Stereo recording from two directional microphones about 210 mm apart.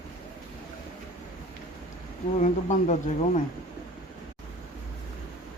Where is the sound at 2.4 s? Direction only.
35° left (ahead or behind).